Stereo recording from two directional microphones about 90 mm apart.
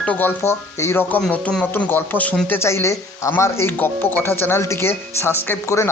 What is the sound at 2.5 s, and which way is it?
Speech, 30° left (ahead or behind).